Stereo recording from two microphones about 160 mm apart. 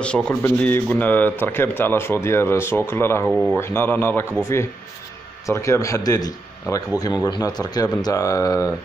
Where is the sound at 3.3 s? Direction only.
Centre (ahead or behind).